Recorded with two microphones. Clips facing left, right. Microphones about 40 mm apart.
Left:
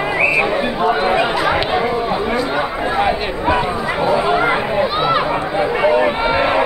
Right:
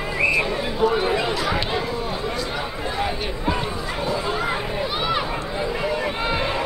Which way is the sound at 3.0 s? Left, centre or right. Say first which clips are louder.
Left 9 dB; left.